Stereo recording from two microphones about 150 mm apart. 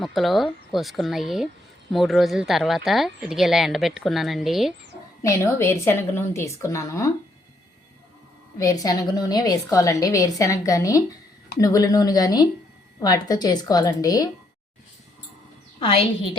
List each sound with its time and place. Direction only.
0.0 s speech: centre (ahead or behind)
5.2 s a woman's voice: 20° left (ahead or behind)
8.5 s a woman's voice: 25° left (ahead or behind)
15.8 s a woman's voice: 40° left (ahead or behind)